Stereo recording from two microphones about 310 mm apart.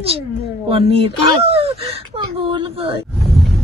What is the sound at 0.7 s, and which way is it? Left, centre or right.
Whimper, centre.